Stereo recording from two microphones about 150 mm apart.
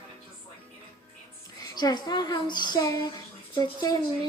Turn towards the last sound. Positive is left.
turn(degrees=25)  # may be behind; listen again after turning